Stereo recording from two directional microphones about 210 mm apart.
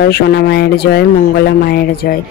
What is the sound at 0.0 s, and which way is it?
A woman's voice, 50° left (ahead or behind).